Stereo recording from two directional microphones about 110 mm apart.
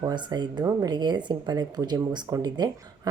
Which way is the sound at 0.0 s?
40° right (ahead or behind).